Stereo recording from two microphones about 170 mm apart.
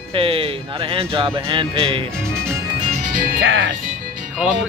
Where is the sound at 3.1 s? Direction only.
50° right (ahead or behind).